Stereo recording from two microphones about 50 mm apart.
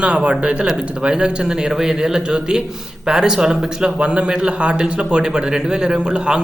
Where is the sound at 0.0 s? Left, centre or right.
Right.